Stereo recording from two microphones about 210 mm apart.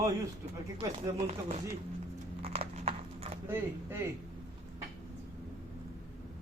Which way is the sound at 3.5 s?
10° right (ahead or behind).